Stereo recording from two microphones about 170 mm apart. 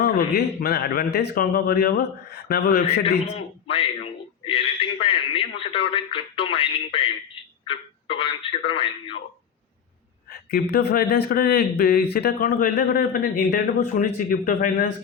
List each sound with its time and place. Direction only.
0.0 s a man's voice: 65° left (ahead or behind)
3.3 s a man's voice: 35° left (ahead or behind)
4.4 s radio: 35° left (ahead or behind)
7.7 s speech: 30° left (ahead or behind)
10.5 s speech: 65° left (ahead or behind)